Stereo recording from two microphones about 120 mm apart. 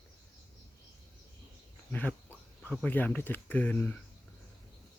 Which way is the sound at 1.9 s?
15° left (ahead or behind).